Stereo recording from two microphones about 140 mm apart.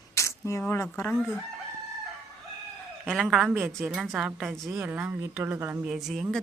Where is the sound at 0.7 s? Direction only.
20° left (ahead or behind).